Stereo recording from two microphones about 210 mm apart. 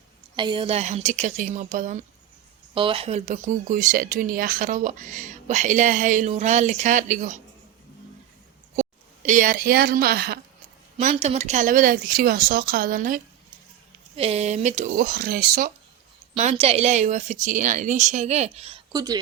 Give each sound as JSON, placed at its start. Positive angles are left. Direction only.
{"t": 0.3, "sound": "speech", "side_deg": -25}
{"t": 2.7, "sound": "speech", "side_deg": -25}
{"t": 8.7, "sound": "a woman's voice", "side_deg": -35}
{"t": 10.9, "sound": "speech", "side_deg": -30}
{"t": 16.3, "sound": "speech", "side_deg": -30}
{"t": 18.9, "sound": "speech", "side_deg": -15}